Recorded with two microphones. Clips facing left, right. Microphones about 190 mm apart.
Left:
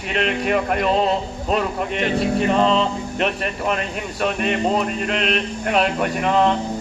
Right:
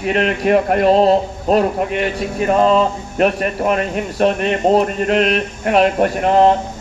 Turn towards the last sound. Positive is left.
turn(degrees=-45)  # may be behind; listen again after turning